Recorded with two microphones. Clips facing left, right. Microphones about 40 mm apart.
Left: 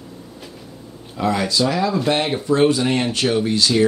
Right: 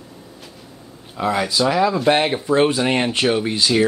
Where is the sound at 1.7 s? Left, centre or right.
Right.